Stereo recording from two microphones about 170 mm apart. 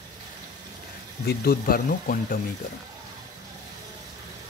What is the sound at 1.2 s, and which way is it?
Speech, 65° left (ahead or behind).